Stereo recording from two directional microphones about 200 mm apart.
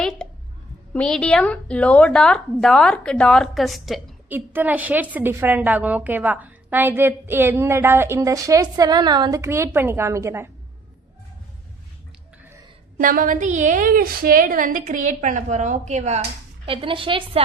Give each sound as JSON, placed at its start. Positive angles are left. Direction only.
{"t": 0.0, "sound": "a sound", "side_deg": 0}
{"t": 0.9, "sound": "a woman's voice", "side_deg": 5}
{"t": 13.0, "sound": "a woman's voice", "side_deg": -45}